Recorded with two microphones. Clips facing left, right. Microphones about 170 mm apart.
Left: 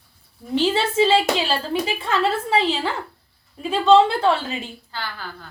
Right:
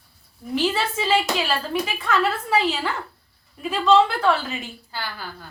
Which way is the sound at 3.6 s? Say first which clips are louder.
Left 3 dB; 30° left (ahead or behind).